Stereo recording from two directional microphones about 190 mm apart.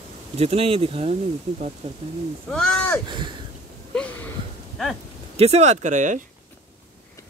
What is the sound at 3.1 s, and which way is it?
Speech, 25° right (ahead or behind).